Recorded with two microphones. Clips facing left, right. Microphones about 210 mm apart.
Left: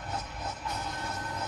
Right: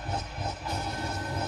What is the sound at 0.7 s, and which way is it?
Music, 30° right (ahead or behind).